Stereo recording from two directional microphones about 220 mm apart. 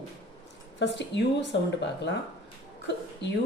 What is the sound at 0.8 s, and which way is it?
Speech, 55° left (ahead or behind).